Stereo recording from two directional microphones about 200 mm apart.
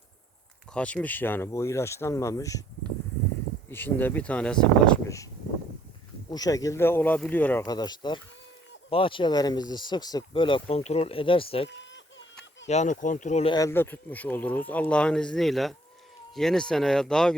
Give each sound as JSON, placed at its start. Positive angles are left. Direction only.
{"t": 0.7, "sound": "speech", "side_deg": 5}
{"t": 3.7, "sound": "speech", "side_deg": 10}
{"t": 6.3, "sound": "speech", "side_deg": 20}
{"t": 7.6, "sound": "speech", "side_deg": 20}
{"t": 13.5, "sound": "speech", "side_deg": 15}